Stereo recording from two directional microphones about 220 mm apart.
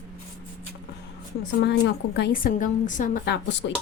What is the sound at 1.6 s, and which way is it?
A woman's voice, 50° left (ahead or behind).